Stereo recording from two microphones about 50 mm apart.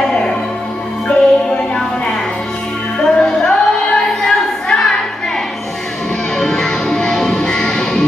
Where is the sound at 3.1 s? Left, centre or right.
Centre.